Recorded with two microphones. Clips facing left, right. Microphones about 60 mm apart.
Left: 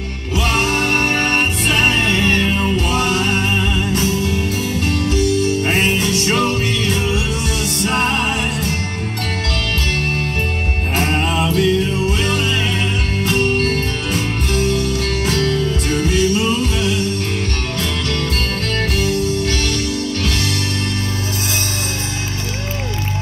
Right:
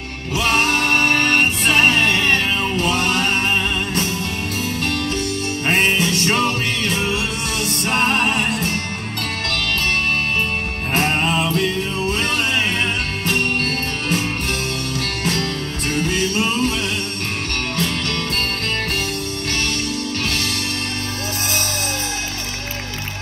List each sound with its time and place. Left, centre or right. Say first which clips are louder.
0.3 s music: even; right
1.1 s music: even; left
1.4 s music: right 1 dB; right
5.0 s music: left 6 dB; right
11.0 s music: even; right
15.4 s music: left 6 dB; left
16.2 s music: left 4 dB; right